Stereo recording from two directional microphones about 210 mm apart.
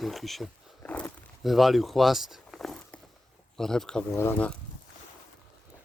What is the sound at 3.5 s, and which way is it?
Speech, centre (ahead or behind).